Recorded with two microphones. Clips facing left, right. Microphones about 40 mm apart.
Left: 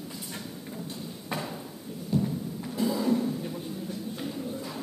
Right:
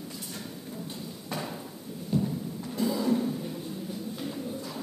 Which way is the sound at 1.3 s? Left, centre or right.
Centre.